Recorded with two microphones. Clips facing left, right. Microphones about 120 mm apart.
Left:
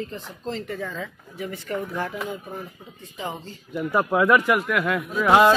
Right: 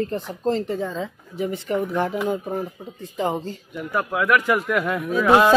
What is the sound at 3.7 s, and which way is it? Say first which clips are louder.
Speech: left 4 dB; 10° left (ahead or behind).